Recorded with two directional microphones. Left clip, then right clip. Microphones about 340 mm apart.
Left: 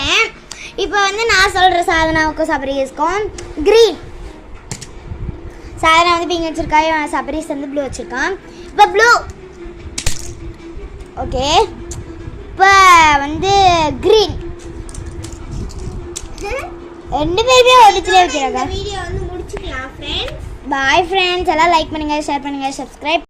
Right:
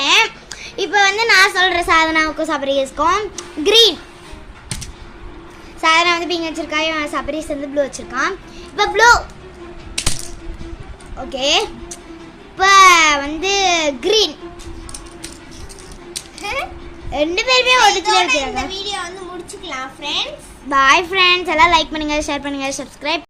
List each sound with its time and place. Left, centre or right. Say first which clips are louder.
0.0 s a sound: right 1 dB; centre
0.6 s a child's voice: right 1 dB; centre
5.8 s a child's voice: left 3 dB; centre
11.3 s a child's voice: left 3 dB; centre
16.4 s a child's voice: even; right
17.1 s a child's voice: left 3 dB; centre
20.0 s a child's voice: right 2 dB; right
20.7 s a child's voice: right 1 dB; centre